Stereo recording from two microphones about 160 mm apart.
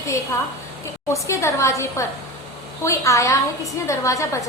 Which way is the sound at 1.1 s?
20° left (ahead or behind).